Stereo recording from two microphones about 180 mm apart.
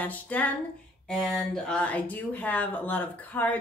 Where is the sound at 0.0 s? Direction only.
10° left (ahead or behind).